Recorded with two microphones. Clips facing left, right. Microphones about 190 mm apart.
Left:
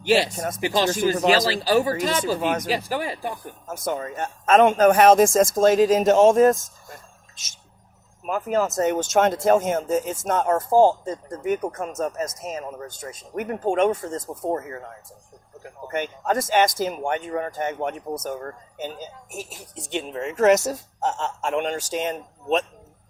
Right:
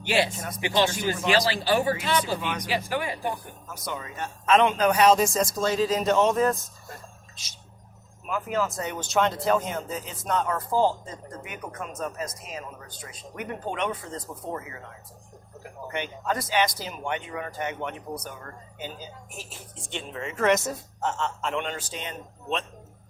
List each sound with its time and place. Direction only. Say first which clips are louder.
0.0 s speech: left 5 dB; 40° left (ahead or behind)
8.3 s speech: left 5 dB; 45° left (ahead or behind)